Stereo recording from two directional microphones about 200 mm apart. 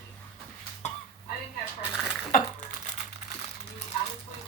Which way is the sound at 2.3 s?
40° left (ahead or behind).